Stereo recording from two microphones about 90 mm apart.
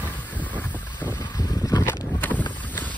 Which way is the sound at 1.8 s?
25° left (ahead or behind).